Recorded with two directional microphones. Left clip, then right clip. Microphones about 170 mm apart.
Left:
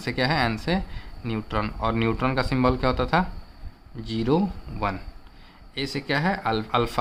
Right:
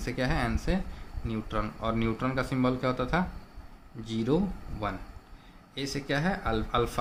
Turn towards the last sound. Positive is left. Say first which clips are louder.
# left 5 dB
turn(degrees=40)  # may be behind; listen again after turning